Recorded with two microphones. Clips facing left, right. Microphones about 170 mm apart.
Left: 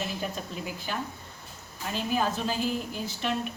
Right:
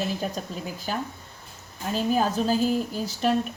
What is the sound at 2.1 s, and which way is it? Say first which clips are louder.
A woman's voice: right 4 dB; 40° right (ahead or behind).